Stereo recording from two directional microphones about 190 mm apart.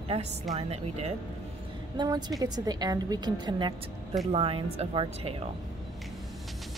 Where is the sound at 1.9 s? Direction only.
20° right (ahead or behind).